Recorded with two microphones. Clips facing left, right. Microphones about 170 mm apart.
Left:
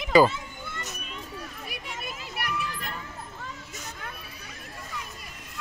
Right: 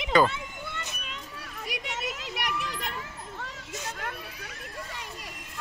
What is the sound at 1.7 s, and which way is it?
Children playing, 80° right.